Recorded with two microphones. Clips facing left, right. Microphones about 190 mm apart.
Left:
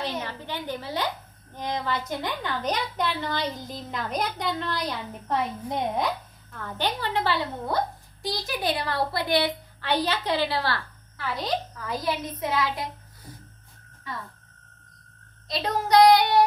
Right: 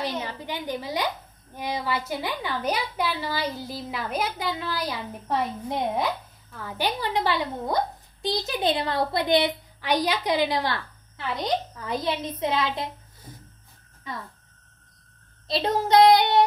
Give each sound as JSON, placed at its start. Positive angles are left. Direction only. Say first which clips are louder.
{"t": 0.2, "sound": "a woman's voice", "louder": "right 1 dB", "side_deg": -10}
{"t": 15.4, "sound": "child singing", "louder": "right 3 dB", "side_deg": -25}